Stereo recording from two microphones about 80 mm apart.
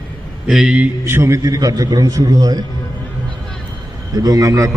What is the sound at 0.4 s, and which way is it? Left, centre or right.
Speech, centre.